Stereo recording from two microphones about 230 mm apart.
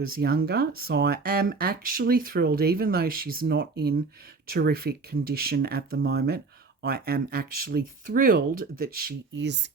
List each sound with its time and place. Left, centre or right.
0.2 s speech: right